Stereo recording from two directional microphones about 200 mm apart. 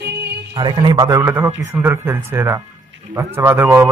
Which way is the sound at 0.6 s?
20° right (ahead or behind).